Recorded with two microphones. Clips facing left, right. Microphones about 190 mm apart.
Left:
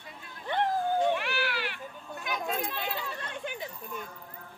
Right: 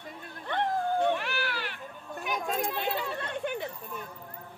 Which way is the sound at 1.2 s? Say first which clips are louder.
Left 1 dB; 45° right (ahead or behind).